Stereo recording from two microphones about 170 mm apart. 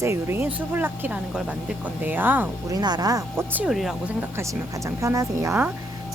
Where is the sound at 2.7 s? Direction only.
25° right (ahead or behind).